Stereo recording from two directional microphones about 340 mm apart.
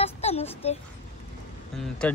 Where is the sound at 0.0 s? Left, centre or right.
Centre.